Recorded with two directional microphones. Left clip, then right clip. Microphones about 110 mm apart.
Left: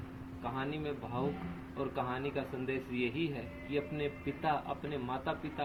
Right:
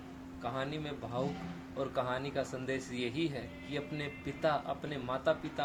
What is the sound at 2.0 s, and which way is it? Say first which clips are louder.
Speech: right 2 dB; 50° right (ahead or behind).